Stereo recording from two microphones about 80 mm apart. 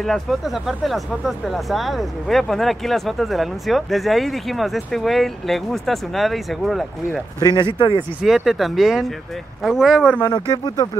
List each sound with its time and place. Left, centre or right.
0.0 s speech: centre
7.3 s speech: left
8.2 s speech: centre
10.5 s speech: left